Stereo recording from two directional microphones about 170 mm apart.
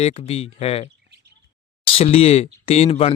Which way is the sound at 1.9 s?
35° left (ahead or behind).